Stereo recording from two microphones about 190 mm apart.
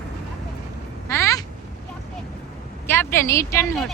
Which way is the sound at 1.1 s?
15° left (ahead or behind).